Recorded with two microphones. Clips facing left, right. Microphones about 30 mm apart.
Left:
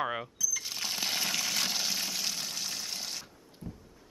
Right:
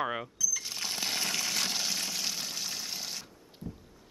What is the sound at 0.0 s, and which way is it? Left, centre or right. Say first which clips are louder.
Water: even; centre.